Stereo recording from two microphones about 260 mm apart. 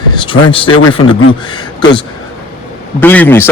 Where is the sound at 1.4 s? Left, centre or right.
Centre.